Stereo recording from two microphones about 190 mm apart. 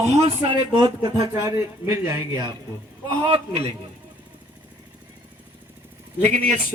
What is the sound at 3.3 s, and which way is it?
Speech, 30° right (ahead or behind).